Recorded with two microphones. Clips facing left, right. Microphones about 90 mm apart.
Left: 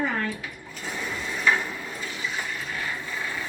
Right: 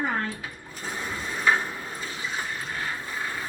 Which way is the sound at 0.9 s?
25° right (ahead or behind).